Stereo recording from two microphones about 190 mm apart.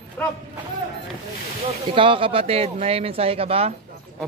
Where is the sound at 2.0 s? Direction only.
25° right (ahead or behind).